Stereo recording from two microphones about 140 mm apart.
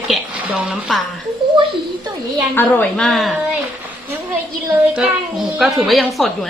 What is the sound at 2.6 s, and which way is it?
Speech, 10° left (ahead or behind).